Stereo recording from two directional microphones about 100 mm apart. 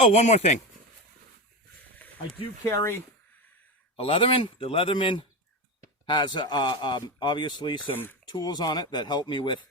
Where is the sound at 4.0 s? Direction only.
60° left (ahead or behind).